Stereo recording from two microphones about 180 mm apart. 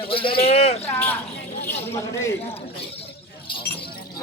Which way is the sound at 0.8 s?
10° left (ahead or behind).